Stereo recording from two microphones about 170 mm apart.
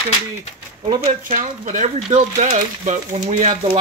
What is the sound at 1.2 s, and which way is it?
Speech, 50° right (ahead or behind).